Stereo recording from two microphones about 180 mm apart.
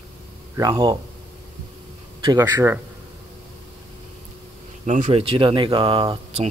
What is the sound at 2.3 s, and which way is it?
Speech, 15° right (ahead or behind).